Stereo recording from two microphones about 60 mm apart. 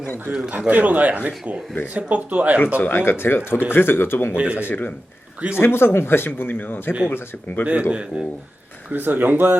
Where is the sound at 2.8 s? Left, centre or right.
Left.